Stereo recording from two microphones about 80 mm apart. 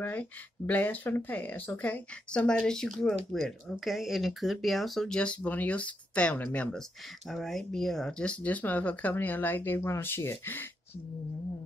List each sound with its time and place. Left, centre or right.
0.0 s speech: left; by 5.0 s centre
5.0 s speech: centre
7.2 s speech: centre; by 10.7 s left